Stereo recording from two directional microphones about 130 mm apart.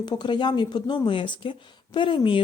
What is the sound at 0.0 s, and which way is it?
Speech, 35° left (ahead or behind).